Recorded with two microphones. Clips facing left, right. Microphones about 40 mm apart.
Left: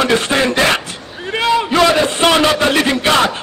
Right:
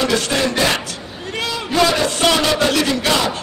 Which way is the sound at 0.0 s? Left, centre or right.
Left.